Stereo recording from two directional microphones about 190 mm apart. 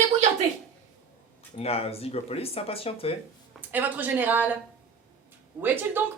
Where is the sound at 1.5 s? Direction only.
30° left (ahead or behind).